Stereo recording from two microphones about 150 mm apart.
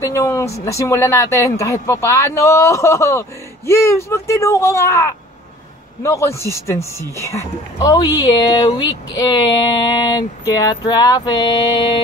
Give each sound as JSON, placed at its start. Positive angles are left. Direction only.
{"t": 0.0, "sound": "speech", "side_deg": 20}